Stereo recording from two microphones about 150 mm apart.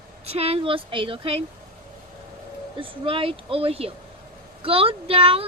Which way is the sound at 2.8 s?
35° right (ahead or behind).